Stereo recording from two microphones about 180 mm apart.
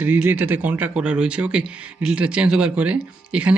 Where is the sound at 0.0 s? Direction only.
10° right (ahead or behind).